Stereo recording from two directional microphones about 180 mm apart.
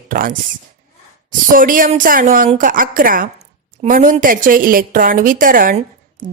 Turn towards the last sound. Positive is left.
turn(degrees=-50)  # may be behind; listen again after turning